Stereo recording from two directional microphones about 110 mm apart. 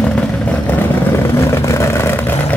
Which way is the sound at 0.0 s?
10° left (ahead or behind).